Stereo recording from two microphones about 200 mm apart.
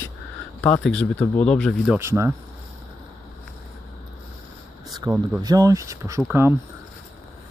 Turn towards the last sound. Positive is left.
turn(degrees=-10)  # may be behind; listen again after turning